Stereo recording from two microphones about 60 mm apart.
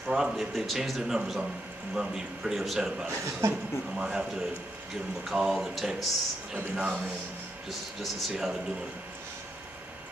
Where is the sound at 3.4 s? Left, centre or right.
Right.